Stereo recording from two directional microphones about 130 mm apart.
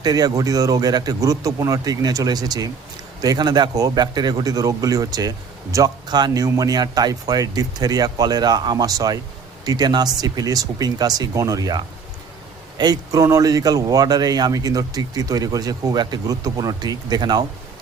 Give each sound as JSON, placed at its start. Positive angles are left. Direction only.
{"t": 0.0, "sound": "speech", "side_deg": -30}